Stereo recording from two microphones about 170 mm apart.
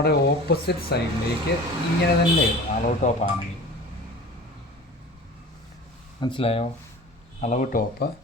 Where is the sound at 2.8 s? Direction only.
45° left (ahead or behind).